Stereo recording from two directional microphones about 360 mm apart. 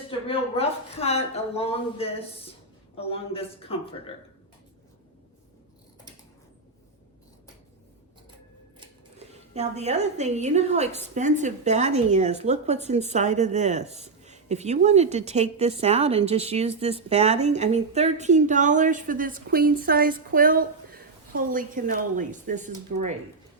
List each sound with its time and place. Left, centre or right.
0.3 s speech: centre
8.8 s a woman's voice: centre